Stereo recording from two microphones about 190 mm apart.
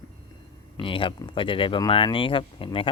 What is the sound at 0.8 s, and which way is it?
Speech, 30° left (ahead or behind).